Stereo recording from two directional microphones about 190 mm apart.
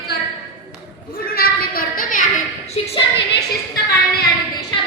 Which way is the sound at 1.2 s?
50° left (ahead or behind).